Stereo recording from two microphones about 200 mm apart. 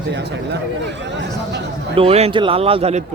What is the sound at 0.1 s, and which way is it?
Speech, 60° right (ahead or behind).